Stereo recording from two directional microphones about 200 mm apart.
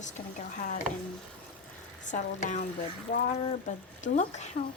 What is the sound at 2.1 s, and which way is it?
Speech, 35° left (ahead or behind).